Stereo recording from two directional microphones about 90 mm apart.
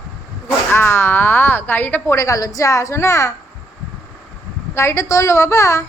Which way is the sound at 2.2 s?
40° left (ahead or behind).